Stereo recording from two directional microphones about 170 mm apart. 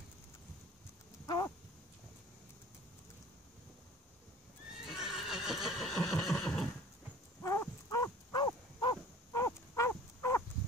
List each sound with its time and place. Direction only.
1.2 s a sound: 25° left (ahead or behind)
4.8 s neigh: centre (ahead or behind)
7.4 s horse: 15° left (ahead or behind)